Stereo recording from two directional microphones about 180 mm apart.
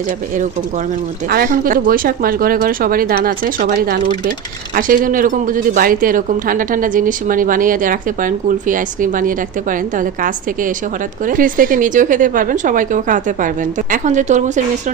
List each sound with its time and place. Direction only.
1.3 s speech: 55° right (ahead or behind)